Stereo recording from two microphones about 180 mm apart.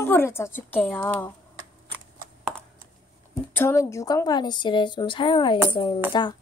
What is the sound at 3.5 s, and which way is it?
Speech, 15° left (ahead or behind).